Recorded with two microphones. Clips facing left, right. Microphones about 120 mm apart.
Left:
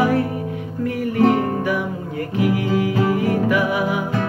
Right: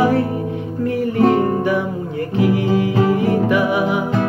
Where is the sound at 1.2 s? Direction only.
25° right (ahead or behind).